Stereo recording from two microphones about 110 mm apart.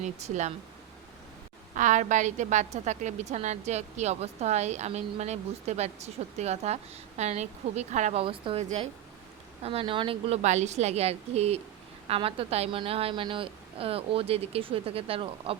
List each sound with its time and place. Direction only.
0.0 s a woman's voice: 90° right
2.0 s a woman's voice: 90° right; by 8.6 s 55° right (ahead or behind)
9.6 s a woman's voice: 55° right (ahead or behind)